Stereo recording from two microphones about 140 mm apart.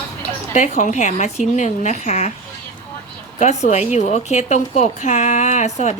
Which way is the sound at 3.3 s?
55° left (ahead or behind).